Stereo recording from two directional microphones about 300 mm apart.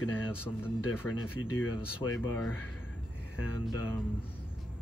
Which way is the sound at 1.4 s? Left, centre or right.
Left.